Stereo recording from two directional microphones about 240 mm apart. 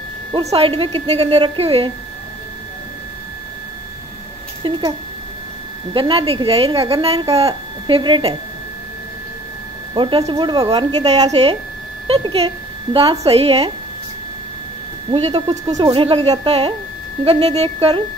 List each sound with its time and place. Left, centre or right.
0.3 s a woman's voice: right
4.6 s speech: right
5.9 s a woman's voice: right
9.9 s a woman's voice: right
15.0 s a woman's voice: right